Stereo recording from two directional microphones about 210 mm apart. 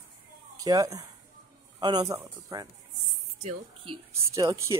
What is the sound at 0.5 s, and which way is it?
A man's voice, 15° right (ahead or behind).